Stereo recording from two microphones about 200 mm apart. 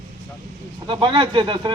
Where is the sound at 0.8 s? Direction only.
25° right (ahead or behind).